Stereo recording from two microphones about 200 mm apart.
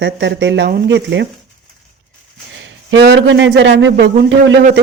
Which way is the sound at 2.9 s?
65° right (ahead or behind).